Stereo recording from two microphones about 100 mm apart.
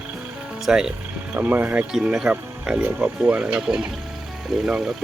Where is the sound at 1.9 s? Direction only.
5° right (ahead or behind).